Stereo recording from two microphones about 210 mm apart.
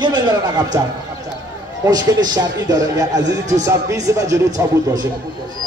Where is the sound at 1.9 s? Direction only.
15° right (ahead or behind).